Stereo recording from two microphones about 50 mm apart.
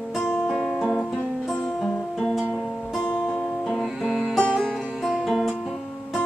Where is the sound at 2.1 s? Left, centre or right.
Centre.